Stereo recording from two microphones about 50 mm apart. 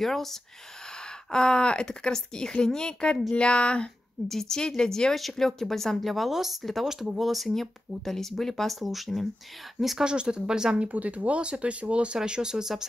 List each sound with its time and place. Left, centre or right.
0.0 s a woman's voice: centre
3.3 s a sound: left
4.3 s speech: centre
10.0 s speech: centre